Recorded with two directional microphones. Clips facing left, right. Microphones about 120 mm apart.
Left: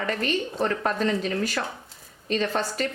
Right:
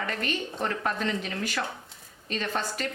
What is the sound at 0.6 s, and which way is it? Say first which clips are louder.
A woman's voice: left 4 dB; 35° left (ahead or behind).